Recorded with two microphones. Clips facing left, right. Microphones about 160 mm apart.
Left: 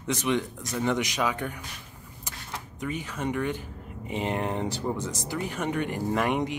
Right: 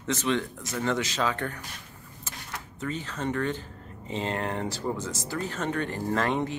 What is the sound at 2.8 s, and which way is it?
Speech, 10° left (ahead or behind).